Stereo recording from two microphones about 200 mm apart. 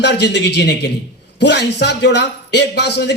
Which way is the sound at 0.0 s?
60° left (ahead or behind).